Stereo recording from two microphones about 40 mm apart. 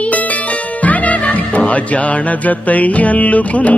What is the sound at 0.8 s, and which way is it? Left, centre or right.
Music, left.